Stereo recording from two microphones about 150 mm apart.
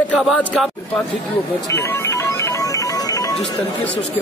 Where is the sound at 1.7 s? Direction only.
20° left (ahead or behind).